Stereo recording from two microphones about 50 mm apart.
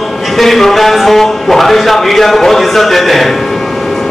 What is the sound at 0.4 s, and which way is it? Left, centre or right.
A man's voice, centre.